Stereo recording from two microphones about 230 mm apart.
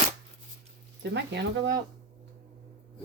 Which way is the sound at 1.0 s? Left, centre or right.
Right.